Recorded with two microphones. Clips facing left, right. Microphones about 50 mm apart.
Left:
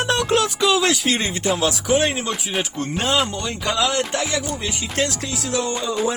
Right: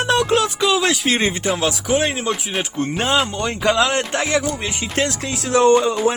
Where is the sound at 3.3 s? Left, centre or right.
Right.